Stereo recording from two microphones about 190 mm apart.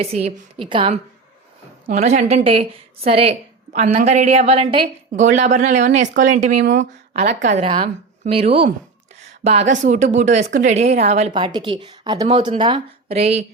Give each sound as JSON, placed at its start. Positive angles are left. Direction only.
{"t": 0.0, "sound": "a woman's voice", "side_deg": -35}
{"t": 1.9, "sound": "a woman's voice", "side_deg": -40}
{"t": 5.2, "sound": "a woman's voice", "side_deg": -40}
{"t": 11.3, "sound": "speech", "side_deg": -25}